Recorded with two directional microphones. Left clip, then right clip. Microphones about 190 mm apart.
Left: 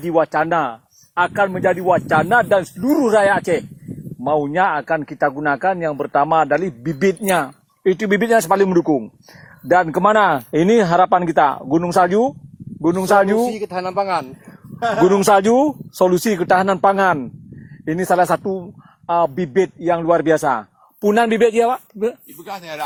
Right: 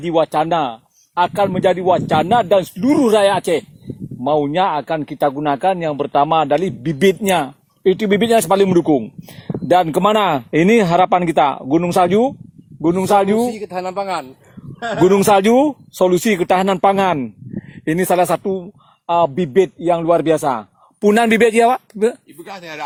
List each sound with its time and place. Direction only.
0.0 s speech: 35° right (ahead or behind)
13.4 s speech: centre (ahead or behind)
15.0 s speech: 25° right (ahead or behind)
19.0 s speech: 35° right (ahead or behind)
22.4 s speech: 10° right (ahead or behind)